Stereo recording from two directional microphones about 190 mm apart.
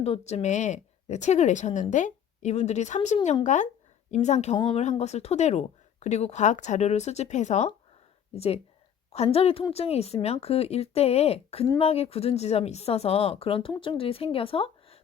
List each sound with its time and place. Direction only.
0.0 s speech: 30° left (ahead or behind)